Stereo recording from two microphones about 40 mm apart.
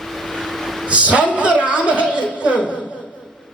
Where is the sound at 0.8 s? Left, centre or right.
Right.